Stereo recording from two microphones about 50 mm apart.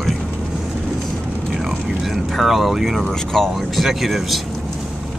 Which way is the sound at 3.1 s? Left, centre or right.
Centre.